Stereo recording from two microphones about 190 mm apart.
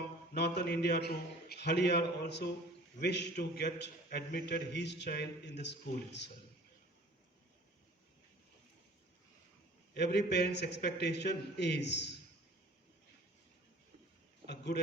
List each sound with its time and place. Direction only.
0.3 s a man's voice: 60° left (ahead or behind)
9.9 s a man's voice: 60° left (ahead or behind)
14.4 s speech: 60° left (ahead or behind)